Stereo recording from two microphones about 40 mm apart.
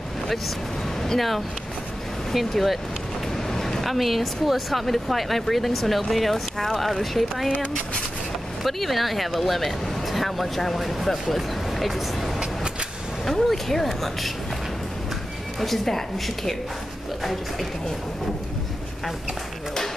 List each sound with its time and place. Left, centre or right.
2.3 s speech: centre
3.4 s speech: centre
8.6 s speech: centre
15.6 s speech: centre
17.2 s speech: centre